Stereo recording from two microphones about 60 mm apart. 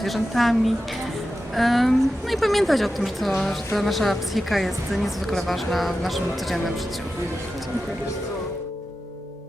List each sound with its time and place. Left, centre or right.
0.0 s a woman's voice: centre
1.5 s a woman's voice: centre